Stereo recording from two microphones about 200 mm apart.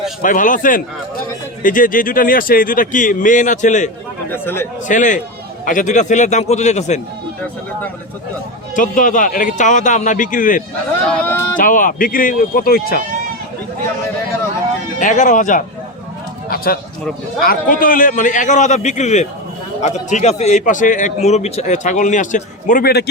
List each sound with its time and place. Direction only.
0.2 s a man's voice: 40° left (ahead or behind)
4.3 s speech: 10° left (ahead or behind)
4.9 s a man's voice: 40° left (ahead or behind)
8.7 s a man's voice: 40° left (ahead or behind)
11.0 s speech: 5° left (ahead or behind)
11.5 s a man's voice: 40° left (ahead or behind)
14.9 s a man's voice: 40° left (ahead or behind)
17.4 s a man's voice: 45° left (ahead or behind)